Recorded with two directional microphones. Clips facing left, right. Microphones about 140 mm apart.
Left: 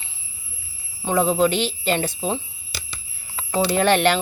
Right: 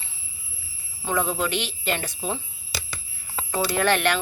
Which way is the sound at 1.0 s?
25° left (ahead or behind).